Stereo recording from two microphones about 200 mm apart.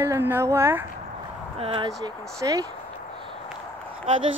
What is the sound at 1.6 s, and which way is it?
Speech, 25° right (ahead or behind).